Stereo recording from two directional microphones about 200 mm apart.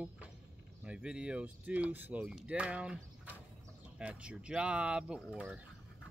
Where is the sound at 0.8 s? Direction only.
5° right (ahead or behind).